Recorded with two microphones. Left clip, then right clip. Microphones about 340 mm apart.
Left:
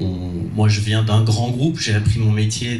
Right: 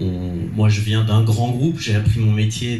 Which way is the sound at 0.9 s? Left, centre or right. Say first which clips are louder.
Left 1 dB; left.